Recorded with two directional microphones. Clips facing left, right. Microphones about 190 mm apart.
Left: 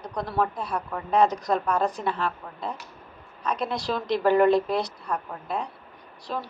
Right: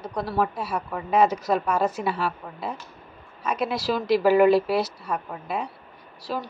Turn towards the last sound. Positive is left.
turn(degrees=-5)  # may be behind; listen again after turning